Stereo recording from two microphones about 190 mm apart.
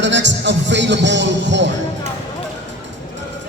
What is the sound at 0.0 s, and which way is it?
Music, 70° right (ahead or behind).